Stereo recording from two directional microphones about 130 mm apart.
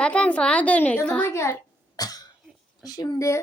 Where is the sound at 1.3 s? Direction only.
20° left (ahead or behind).